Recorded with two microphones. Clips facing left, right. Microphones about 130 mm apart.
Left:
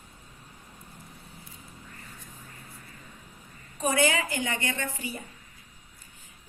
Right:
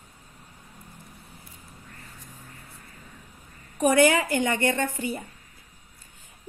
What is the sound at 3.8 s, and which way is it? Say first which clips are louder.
A woman's voice: right 6 dB; 60° right (ahead or behind).